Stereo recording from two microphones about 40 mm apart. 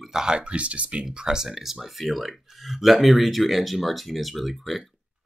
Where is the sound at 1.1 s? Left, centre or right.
Centre.